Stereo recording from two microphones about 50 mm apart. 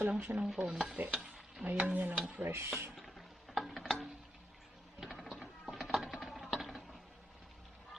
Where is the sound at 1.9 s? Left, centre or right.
Right.